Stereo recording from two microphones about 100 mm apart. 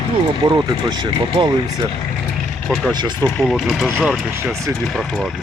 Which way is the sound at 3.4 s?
Centre (ahead or behind).